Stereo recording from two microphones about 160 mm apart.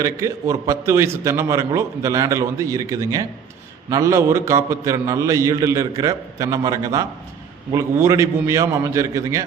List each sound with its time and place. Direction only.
0.0 s a man's voice: 20° right (ahead or behind)